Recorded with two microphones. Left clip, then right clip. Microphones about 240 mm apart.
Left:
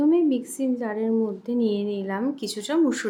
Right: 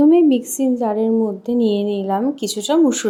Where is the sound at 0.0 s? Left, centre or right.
Centre.